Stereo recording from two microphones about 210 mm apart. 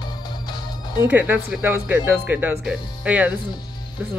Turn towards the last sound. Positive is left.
turn(degrees=-5)  # may be behind; listen again after turning